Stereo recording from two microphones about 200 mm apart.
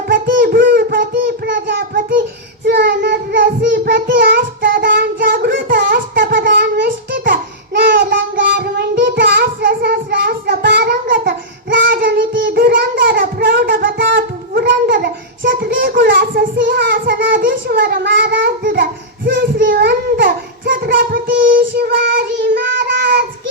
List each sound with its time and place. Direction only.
0.1 s a sound: 45° right (ahead or behind)
2.0 s child singing: 45° right (ahead or behind)
2.6 s child singing: 60° right (ahead or behind)
8.1 s child singing: 50° right (ahead or behind)